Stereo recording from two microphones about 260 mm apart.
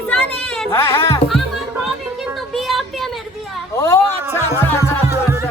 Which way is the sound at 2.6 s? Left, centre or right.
Centre.